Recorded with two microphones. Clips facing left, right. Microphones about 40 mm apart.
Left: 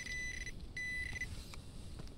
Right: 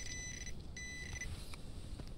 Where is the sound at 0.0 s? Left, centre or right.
Centre.